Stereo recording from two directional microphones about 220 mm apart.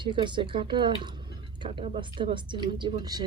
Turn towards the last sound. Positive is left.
turn(degrees=-20)  # may be behind; listen again after turning